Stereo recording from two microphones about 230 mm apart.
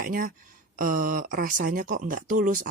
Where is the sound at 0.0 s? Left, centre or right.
Right.